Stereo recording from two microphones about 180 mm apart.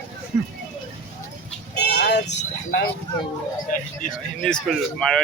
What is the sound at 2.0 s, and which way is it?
Vehicle, 70° left (ahead or behind).